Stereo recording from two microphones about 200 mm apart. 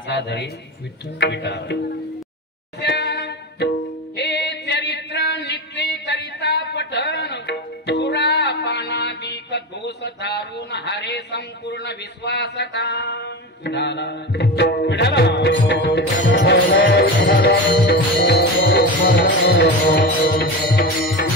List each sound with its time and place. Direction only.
0.1 s speech: 60° left (ahead or behind)
2.8 s music: 55° left (ahead or behind)
4.2 s a sound: 55° left (ahead or behind)